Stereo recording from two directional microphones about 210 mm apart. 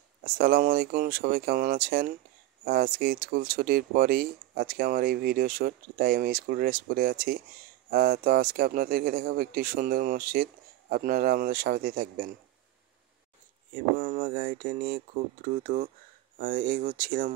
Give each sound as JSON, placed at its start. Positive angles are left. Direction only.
{"t": 0.2, "sound": "speech", "side_deg": -40}
{"t": 13.9, "sound": "speech", "side_deg": -40}